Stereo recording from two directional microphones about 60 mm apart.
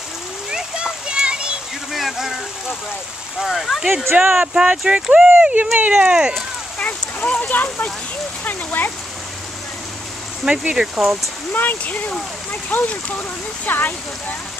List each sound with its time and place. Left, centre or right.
0.5 s a sound: centre
1.9 s a sound: centre
3.3 s speech: centre
4.0 s speech: right
4.6 s speech: centre
6.8 s speech: left
10.4 s speech: centre
11.5 s speech: left